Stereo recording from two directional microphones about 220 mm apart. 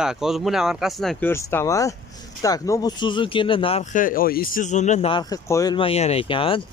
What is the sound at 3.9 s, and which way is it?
Speech, 40° left (ahead or behind).